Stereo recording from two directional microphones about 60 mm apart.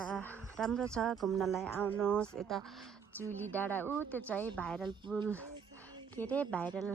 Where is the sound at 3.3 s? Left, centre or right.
Left.